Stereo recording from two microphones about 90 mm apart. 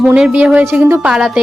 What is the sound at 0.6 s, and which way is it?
Speech, 25° right (ahead or behind).